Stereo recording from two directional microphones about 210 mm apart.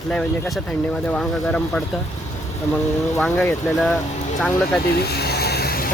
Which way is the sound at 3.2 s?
5° left (ahead or behind).